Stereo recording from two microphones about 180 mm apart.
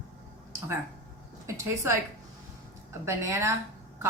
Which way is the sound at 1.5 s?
15° right (ahead or behind).